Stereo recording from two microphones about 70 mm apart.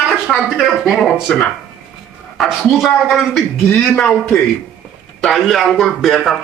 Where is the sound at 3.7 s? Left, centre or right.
Left.